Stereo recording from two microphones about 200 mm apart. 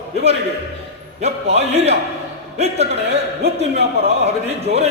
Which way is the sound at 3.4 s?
30° right (ahead or behind).